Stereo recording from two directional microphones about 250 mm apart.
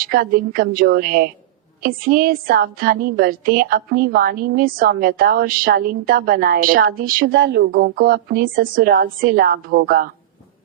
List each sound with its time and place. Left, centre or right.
0.0 s a woman's voice: right